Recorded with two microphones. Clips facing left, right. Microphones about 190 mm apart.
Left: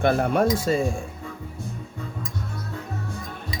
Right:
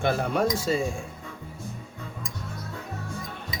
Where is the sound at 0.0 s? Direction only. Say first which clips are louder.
Left 4 dB; 50° left (ahead or behind).